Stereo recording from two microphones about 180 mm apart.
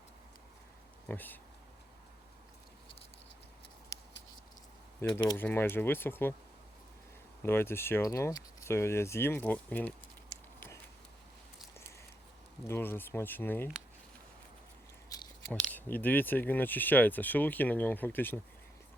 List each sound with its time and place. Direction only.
1.0 s speech: 10° left (ahead or behind)
4.9 s speech: 15° left (ahead or behind)
7.4 s speech: 10° left (ahead or behind)
12.6 s speech: 10° left (ahead or behind)
15.1 s scissors: 20° left (ahead or behind)
15.5 s speech: 10° left (ahead or behind)